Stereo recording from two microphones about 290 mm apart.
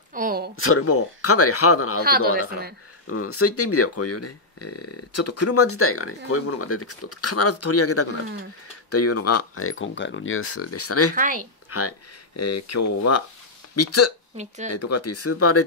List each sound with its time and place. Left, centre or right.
0.1 s a sound: right
0.6 s speech: left
2.0 s speech: right
3.1 s speech: left
11.1 s speech: right
12.4 s speech: left
14.3 s speech: right
14.7 s speech: left